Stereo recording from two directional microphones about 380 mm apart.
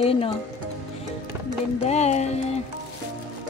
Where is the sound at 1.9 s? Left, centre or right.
Centre.